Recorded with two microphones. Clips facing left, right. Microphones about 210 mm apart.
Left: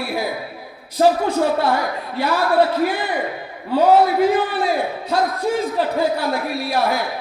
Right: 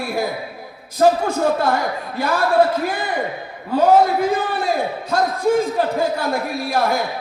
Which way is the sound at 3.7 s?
45° right (ahead or behind).